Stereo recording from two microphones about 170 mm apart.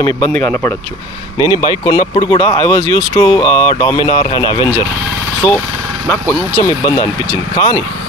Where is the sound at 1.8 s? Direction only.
25° left (ahead or behind).